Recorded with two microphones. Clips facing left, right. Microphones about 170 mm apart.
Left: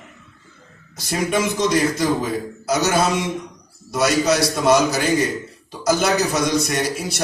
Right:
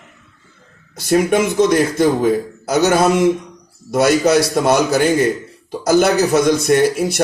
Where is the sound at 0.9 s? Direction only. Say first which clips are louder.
Right 7 dB; 55° right (ahead or behind).